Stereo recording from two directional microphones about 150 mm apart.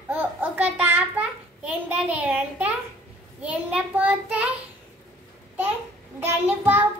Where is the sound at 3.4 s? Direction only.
10° right (ahead or behind).